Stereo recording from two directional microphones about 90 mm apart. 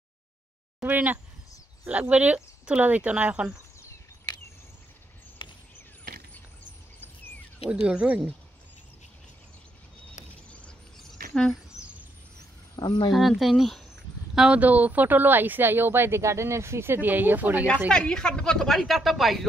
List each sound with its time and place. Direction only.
0.8 s speech: 20° right (ahead or behind)
7.7 s speech: 10° right (ahead or behind)
11.0 s a sound: 5° left (ahead or behind)
12.7 s speech: 55° left (ahead or behind)
13.1 s speech: centre (ahead or behind)
14.6 s speech: 20° right (ahead or behind)
17.9 s speech: 10° left (ahead or behind)